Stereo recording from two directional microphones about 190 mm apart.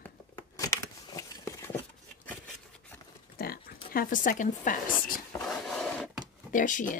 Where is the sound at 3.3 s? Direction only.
50° left (ahead or behind).